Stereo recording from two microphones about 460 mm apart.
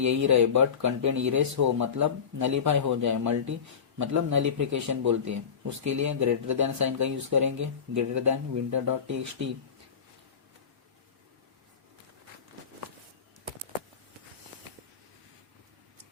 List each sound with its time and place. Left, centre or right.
0.0 s speech: right